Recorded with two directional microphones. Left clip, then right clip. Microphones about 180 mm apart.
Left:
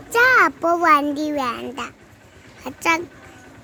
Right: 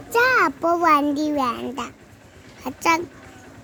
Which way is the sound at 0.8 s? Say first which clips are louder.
Left 2 dB; 20° right (ahead or behind).